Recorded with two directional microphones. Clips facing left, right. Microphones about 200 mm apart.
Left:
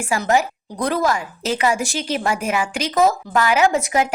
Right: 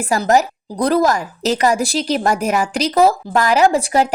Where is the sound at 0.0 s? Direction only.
40° right (ahead or behind).